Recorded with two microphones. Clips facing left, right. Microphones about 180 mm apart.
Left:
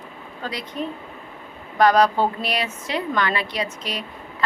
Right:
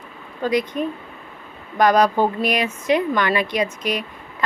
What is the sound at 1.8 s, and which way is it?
A woman's voice, 15° right (ahead or behind).